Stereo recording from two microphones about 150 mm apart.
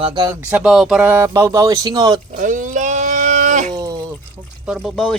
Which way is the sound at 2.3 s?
60° right (ahead or behind).